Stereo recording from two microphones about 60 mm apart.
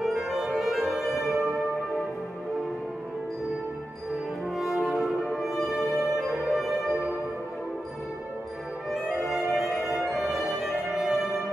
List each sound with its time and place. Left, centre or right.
0.0 s music: centre
4.6 s music: centre
8.9 s music: centre